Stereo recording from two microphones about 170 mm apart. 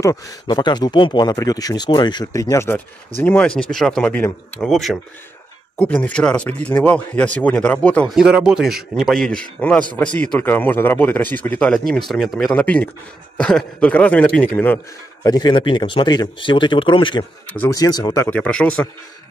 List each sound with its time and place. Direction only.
0.0 s a man's voice: 20° left (ahead or behind)
8.2 s a man's voice: 5° right (ahead or behind)
15.2 s speech: 25° left (ahead or behind)
17.5 s a man's voice: 10° left (ahead or behind)
17.7 s a man's voice: 25° left (ahead or behind); by 18.9 s 5° left (ahead or behind)